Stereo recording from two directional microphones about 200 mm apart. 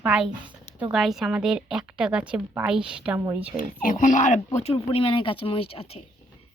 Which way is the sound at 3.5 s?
45° left (ahead or behind).